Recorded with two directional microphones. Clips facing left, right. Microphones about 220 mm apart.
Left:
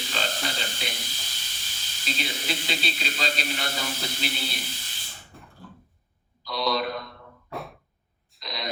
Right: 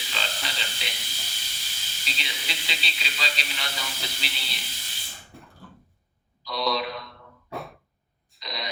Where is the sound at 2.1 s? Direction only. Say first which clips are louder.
Left 7 dB; 45° left (ahead or behind).